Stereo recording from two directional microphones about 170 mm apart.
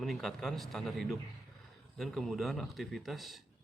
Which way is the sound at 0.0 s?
Centre (ahead or behind).